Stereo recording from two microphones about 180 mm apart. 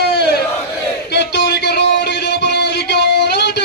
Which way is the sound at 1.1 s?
70° left (ahead or behind).